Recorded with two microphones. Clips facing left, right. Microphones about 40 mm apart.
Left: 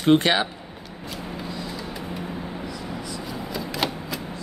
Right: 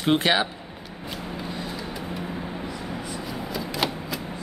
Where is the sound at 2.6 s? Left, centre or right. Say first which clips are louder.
Even; right.